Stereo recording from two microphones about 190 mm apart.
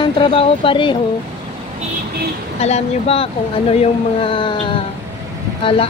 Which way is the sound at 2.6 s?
35° left (ahead or behind).